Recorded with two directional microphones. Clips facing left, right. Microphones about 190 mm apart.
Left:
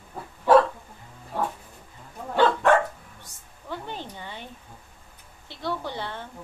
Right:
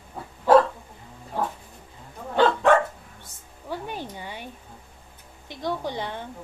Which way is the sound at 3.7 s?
10° right (ahead or behind).